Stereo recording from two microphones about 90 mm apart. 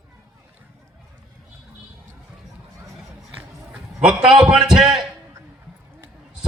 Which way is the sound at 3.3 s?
10° right (ahead or behind).